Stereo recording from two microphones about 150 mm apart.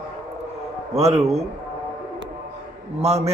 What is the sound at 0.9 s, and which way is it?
Speech, 45° right (ahead or behind).